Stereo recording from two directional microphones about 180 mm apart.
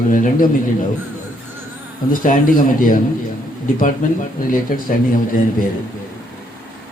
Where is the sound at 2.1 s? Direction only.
50° left (ahead or behind).